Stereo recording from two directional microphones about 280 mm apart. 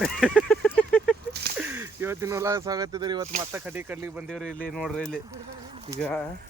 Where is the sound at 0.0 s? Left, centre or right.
Centre.